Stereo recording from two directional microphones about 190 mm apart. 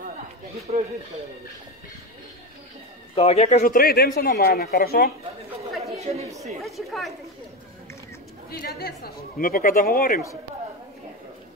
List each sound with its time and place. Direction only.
0.7 s speech: 35° right (ahead or behind)
3.2 s speech: 35° left (ahead or behind); by 5.1 s 55° left (ahead or behind)
5.9 s chatter: 35° right (ahead or behind)
6.6 s a woman's voice: centre (ahead or behind)
8.5 s speech: 55° left (ahead or behind)